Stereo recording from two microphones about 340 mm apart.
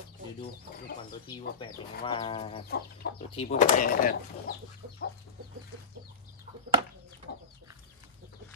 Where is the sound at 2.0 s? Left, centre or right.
Centre.